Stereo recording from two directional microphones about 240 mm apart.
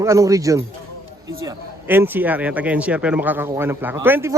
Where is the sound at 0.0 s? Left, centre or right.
Centre.